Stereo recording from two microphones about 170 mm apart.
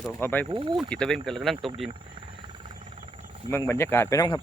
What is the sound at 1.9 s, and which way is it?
Helicopter, 30° right (ahead or behind).